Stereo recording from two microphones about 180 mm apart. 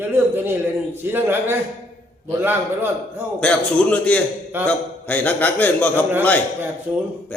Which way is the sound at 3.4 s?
5° left (ahead or behind).